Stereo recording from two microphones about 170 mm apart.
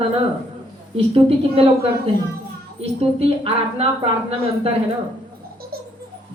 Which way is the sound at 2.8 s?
35° right (ahead or behind).